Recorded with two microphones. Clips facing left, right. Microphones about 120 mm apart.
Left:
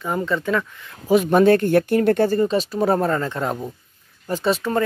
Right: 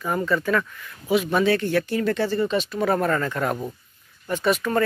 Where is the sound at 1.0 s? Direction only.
45° left (ahead or behind).